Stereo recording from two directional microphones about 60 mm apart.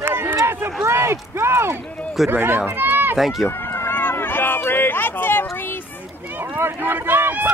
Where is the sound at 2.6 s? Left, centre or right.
Right.